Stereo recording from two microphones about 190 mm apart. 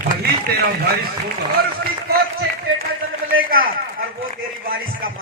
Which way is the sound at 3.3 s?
50° right (ahead or behind).